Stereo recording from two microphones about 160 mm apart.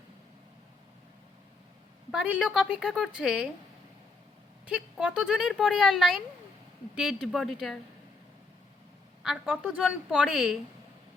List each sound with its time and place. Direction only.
2.0 s speech: 5° right (ahead or behind)
4.6 s speech: 5° right (ahead or behind)
9.2 s speech: 5° right (ahead or behind)